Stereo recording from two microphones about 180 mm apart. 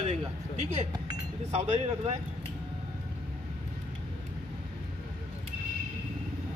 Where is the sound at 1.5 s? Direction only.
35° right (ahead or behind).